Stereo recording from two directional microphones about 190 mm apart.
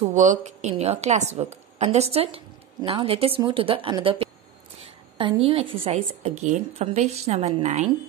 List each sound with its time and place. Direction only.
0.0 s a woman's voice: 40° right (ahead or behind)